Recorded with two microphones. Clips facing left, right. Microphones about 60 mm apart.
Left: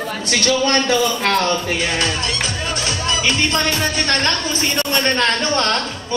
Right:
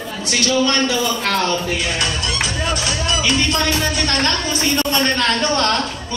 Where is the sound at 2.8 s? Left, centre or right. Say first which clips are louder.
Even; left.